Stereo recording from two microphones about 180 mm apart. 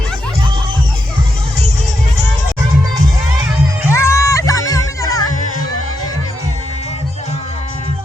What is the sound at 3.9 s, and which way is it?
Music, 15° left (ahead or behind).